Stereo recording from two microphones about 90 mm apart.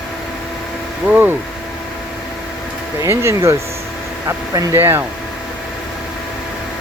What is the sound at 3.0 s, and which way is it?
Speech, 30° right (ahead or behind).